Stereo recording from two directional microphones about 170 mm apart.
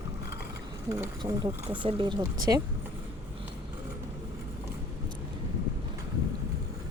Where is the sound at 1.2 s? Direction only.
25° right (ahead or behind).